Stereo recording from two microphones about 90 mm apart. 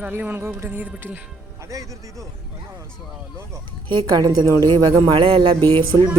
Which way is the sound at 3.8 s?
55° right (ahead or behind).